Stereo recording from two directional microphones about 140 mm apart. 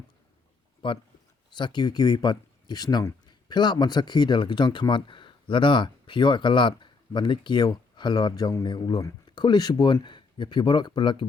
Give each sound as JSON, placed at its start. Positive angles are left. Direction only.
{"t": 0.8, "sound": "speech", "side_deg": 35}